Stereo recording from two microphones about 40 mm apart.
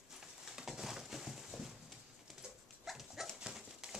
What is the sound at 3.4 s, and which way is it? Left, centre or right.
Dog, centre.